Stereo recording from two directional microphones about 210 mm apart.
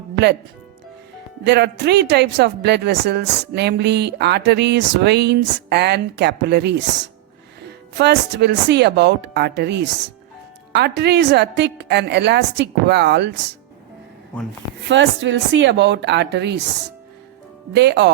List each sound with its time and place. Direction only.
1.5 s a woman's voice: 55° right (ahead or behind)
14.8 s a woman's voice: 60° right (ahead or behind)
17.7 s a woman's voice: 55° right (ahead or behind)